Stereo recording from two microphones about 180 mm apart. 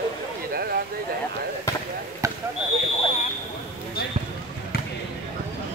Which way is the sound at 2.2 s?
15° right (ahead or behind).